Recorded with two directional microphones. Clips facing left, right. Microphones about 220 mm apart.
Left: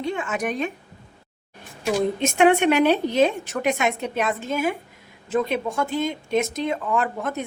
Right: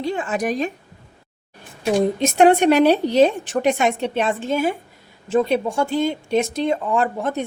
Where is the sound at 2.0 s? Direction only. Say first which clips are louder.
Right 4 dB; 35° right (ahead or behind).